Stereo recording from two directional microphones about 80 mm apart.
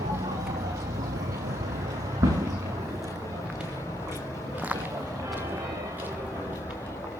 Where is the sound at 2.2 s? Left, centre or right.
Right.